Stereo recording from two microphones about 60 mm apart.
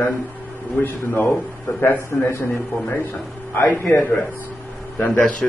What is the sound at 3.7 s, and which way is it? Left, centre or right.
A man's voice, left.